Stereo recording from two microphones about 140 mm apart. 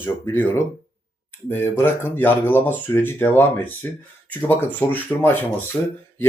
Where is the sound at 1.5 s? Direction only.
15° left (ahead or behind).